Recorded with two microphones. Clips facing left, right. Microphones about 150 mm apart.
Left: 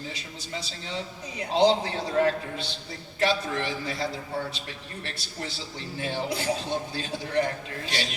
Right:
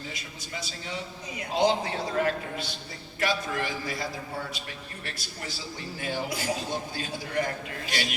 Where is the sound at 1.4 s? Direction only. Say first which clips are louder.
Left 3 dB; 30° left (ahead or behind).